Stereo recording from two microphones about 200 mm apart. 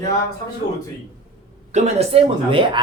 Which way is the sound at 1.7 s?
30° right (ahead or behind).